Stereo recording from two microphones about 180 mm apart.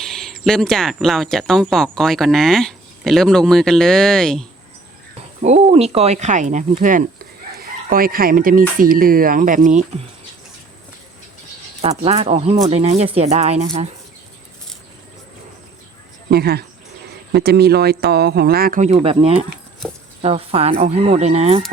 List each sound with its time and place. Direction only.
0.0 s cricket: centre (ahead or behind)
0.9 s speech: centre (ahead or behind)
5.4 s speech: 35° right (ahead or behind)
11.8 s speech: 35° right (ahead or behind)
16.3 s speech: 60° right (ahead or behind); by 21.6 s 35° right (ahead or behind)